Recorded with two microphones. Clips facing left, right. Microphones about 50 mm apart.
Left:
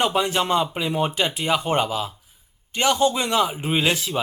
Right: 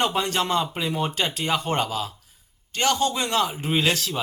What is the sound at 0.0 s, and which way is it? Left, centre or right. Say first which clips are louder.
Speech: left 2 dB; centre.